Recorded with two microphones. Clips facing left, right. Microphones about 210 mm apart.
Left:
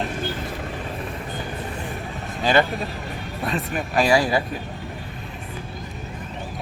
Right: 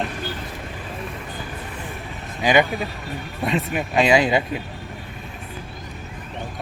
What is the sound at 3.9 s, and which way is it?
Speech, 20° right (ahead or behind).